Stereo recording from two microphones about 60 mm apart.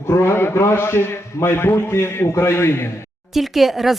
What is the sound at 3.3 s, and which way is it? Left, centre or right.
Speech, centre.